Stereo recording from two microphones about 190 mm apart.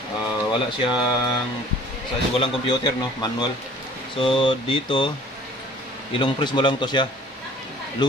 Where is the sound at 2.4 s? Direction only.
25° left (ahead or behind).